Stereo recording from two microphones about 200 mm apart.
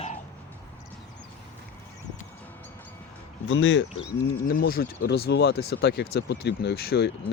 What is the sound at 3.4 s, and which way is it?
Speech, 70° left (ahead or behind).